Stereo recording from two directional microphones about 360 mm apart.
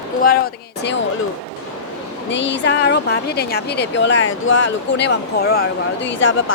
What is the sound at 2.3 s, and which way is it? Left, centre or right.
Speech, left.